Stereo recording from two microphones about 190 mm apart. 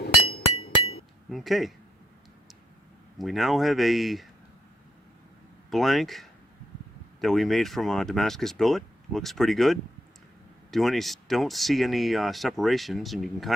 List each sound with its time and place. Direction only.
0.3 s hammer: 30° left (ahead or behind)
1.3 s speech: centre (ahead or behind)
3.2 s speech: centre (ahead or behind)
5.7 s speech: centre (ahead or behind)